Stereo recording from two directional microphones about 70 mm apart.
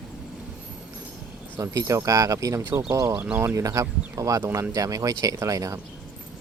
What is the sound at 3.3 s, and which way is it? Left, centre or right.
Speech, right.